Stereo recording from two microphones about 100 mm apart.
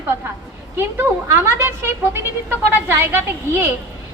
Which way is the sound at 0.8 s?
25° right (ahead or behind).